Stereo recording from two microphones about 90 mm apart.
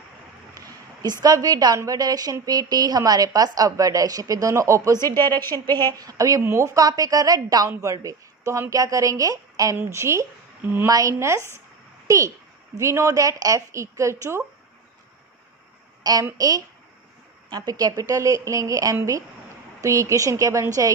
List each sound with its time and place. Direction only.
0.6 s a woman's voice: 45° right (ahead or behind)
4.9 s a woman's voice: 25° left (ahead or behind)
5.9 s a woman's voice: 45° right (ahead or behind)
10.6 s speech: 20° right (ahead or behind)
10.9 s a woman's voice: 35° right (ahead or behind)
16.0 s a woman's voice: 45° right (ahead or behind)